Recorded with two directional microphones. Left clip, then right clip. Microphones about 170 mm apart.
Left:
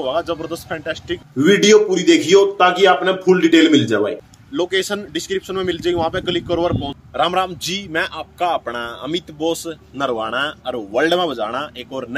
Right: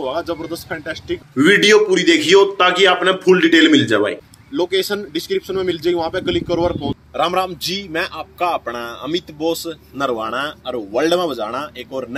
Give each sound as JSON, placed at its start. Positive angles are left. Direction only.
{"t": 0.0, "sound": "a man's voice", "side_deg": 5}
{"t": 4.6, "sound": "speech", "side_deg": 35}
{"t": 5.5, "sound": "a man's voice", "side_deg": 5}
{"t": 9.1, "sound": "speech", "side_deg": 40}
{"t": 9.6, "sound": "a man's voice", "side_deg": 0}